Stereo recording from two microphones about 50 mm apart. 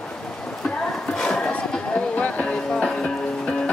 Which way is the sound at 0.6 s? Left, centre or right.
Centre.